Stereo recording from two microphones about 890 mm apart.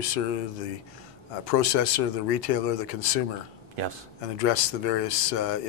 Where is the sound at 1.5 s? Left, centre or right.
Left.